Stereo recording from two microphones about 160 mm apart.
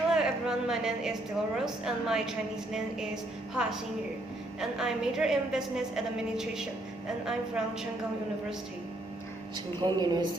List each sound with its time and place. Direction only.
0.1 s a sound: 5° right (ahead or behind)
1.5 s a woman's voice: 5° right (ahead or behind)
3.5 s a woman's voice: 5° right (ahead or behind)
9.8 s speech: 25° right (ahead or behind)